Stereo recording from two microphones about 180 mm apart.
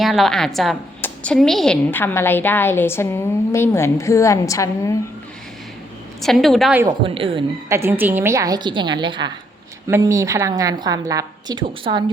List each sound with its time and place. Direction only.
0.0 s a woman's voice: centre (ahead or behind); by 4.9 s 15° left (ahead or behind)
6.2 s a woman's voice: centre (ahead or behind)
7.0 s a woman's voice: 30° right (ahead or behind)
7.7 s a woman's voice: 15° right (ahead or behind)